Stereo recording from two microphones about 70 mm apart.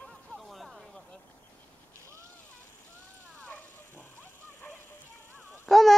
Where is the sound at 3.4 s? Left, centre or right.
Left.